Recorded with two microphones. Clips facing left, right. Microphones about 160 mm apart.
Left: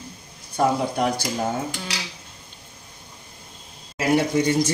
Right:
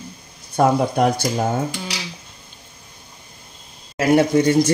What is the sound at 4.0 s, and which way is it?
Speech, 60° right (ahead or behind).